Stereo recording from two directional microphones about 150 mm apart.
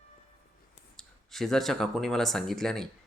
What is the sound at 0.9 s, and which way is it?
Speech, centre (ahead or behind).